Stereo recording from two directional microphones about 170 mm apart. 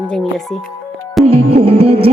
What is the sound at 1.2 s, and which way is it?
Music, 35° right (ahead or behind).